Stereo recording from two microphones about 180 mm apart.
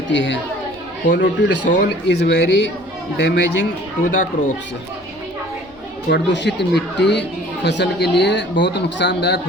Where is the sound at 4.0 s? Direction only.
45° left (ahead or behind).